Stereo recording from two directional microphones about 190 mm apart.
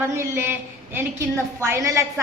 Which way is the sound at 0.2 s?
10° right (ahead or behind).